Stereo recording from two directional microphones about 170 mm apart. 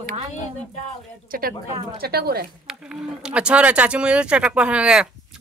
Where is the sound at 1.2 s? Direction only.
60° right (ahead or behind).